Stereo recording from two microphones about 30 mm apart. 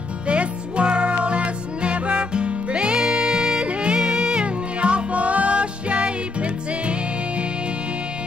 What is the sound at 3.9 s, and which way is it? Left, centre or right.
Music, right.